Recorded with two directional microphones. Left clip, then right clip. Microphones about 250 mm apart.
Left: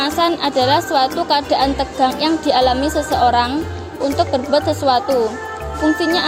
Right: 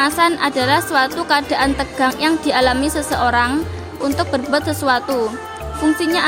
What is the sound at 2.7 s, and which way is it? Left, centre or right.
Speech, right.